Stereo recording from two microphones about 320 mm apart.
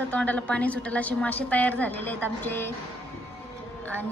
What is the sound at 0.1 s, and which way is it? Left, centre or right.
A woman's voice, centre.